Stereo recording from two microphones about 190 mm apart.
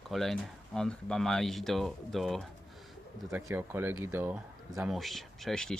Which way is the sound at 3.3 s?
10° right (ahead or behind).